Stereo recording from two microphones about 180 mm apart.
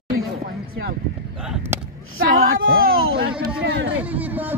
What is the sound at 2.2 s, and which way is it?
Speech, 55° right (ahead or behind).